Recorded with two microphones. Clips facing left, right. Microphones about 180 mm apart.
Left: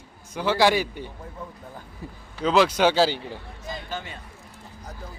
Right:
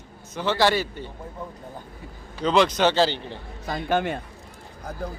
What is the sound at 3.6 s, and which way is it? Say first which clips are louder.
Speech: right 10 dB; 65° right (ahead or behind).